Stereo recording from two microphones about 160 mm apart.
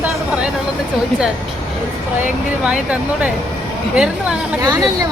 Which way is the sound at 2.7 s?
10° right (ahead or behind).